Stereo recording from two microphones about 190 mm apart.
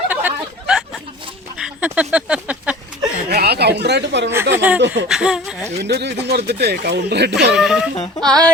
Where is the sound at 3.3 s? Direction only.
60° right (ahead or behind).